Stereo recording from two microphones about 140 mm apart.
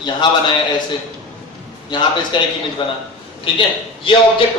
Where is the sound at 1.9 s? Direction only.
35° left (ahead or behind).